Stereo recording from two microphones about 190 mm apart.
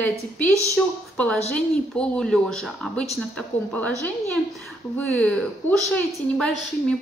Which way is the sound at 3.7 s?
5° left (ahead or behind).